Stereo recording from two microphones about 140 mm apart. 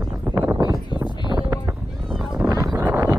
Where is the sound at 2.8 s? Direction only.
15° right (ahead or behind).